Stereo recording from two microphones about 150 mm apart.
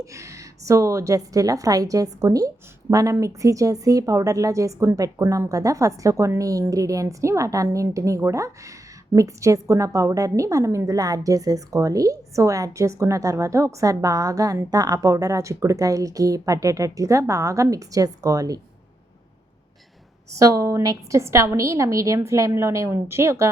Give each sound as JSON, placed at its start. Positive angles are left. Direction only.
{"t": 0.0, "sound": "a woman's voice", "side_deg": -20}
{"t": 20.3, "sound": "a woman's voice", "side_deg": -20}